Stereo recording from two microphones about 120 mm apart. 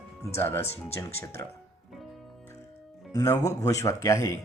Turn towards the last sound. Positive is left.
turn(degrees=25)  # may be behind; listen again after turning